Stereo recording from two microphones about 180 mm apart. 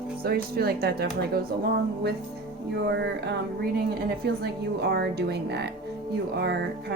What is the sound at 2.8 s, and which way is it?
Speech, 70° right (ahead or behind).